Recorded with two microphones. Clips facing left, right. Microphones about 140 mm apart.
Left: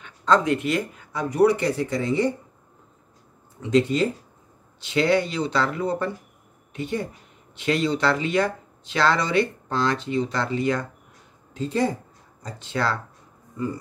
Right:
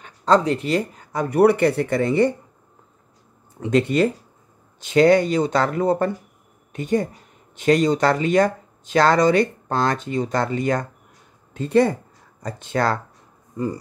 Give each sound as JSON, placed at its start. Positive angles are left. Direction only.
{"t": 0.0, "sound": "speech", "side_deg": -35}
{"t": 1.3, "sound": "speech", "side_deg": -60}
{"t": 3.7, "sound": "speech", "side_deg": -65}
{"t": 4.7, "sound": "speech", "side_deg": -45}
{"t": 11.5, "sound": "speech", "side_deg": -60}